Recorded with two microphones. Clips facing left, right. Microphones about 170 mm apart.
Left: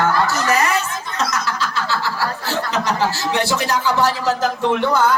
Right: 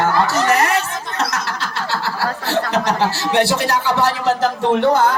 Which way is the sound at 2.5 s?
65° right (ahead or behind).